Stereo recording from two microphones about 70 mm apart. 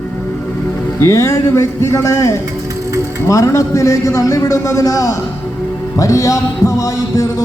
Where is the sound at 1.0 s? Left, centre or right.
Left.